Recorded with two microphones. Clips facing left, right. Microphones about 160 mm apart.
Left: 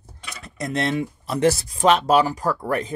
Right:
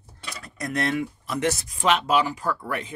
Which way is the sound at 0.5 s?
25° left (ahead or behind).